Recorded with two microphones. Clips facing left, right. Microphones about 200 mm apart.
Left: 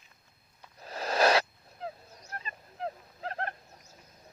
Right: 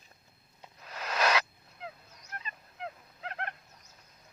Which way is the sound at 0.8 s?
35° left (ahead or behind).